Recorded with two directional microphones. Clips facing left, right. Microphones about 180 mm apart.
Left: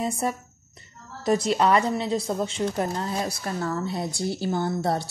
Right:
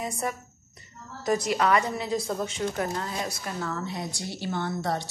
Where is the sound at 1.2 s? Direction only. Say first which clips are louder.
Left 3 dB; 25° left (ahead or behind).